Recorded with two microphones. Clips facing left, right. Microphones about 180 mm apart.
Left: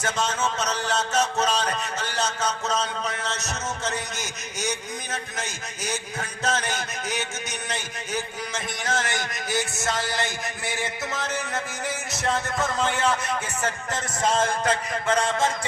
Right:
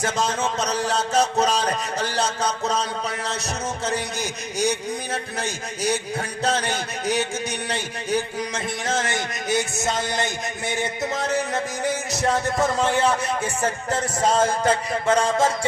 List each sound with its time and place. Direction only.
0.0 s music: 35° right (ahead or behind)
7.7 s a man's voice: 30° right (ahead or behind)
12.2 s music: 30° right (ahead or behind)